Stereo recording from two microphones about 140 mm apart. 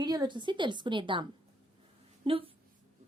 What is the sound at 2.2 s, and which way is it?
Speech, 40° right (ahead or behind).